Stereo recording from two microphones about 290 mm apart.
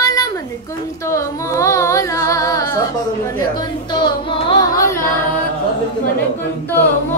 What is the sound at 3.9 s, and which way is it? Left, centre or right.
Music, centre.